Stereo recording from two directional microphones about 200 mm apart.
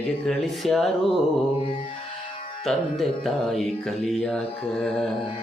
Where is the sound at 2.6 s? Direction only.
Centre (ahead or behind).